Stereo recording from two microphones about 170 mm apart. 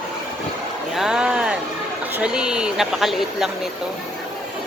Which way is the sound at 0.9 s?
5° right (ahead or behind).